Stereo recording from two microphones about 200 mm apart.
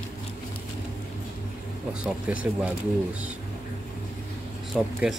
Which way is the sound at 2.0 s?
5° right (ahead or behind).